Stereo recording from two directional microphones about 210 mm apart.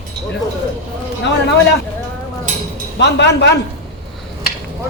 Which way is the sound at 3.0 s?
55° left (ahead or behind).